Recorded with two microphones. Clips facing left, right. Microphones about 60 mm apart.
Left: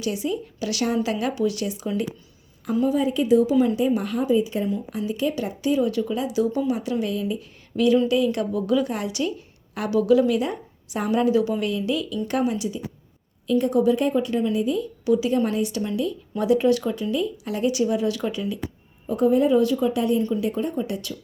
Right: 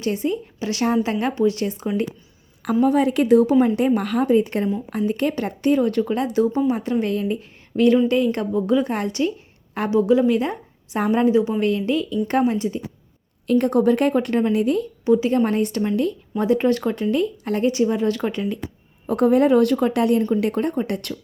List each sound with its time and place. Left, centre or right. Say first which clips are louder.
0.0 s a woman's voice: right 3 dB; right
2.8 s a woman's voice: right 4 dB; right
13.5 s speech: right 2 dB; right
15.0 s a woman's voice: right 3 dB; right
19.0 s speech: right 3 dB; right